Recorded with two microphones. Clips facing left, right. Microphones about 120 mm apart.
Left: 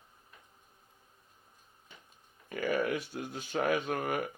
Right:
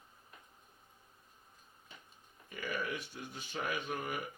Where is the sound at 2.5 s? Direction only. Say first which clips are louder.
Left 8 dB; 60° left (ahead or behind).